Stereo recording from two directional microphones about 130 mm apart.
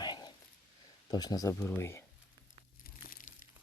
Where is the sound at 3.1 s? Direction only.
90° left.